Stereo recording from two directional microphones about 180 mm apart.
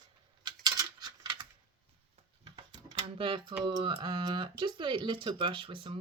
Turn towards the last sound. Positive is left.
turn(degrees=-30)  # may be behind; listen again after turning